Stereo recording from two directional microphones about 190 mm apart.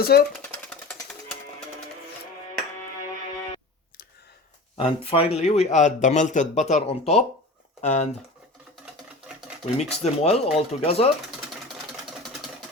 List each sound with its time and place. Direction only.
0.0 s speech: 55° left (ahead or behind)
0.4 s jackhammer: 5° left (ahead or behind)
4.8 s speech: 30° left (ahead or behind)
9.7 s speech: 35° left (ahead or behind)